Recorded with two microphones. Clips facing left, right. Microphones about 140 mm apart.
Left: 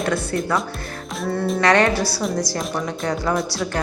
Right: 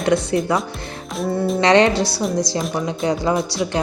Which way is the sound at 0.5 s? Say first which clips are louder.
Right 2 dB; 20° right (ahead or behind).